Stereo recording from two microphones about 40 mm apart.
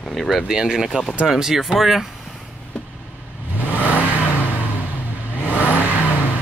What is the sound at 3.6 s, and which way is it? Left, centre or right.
Vehicle, right.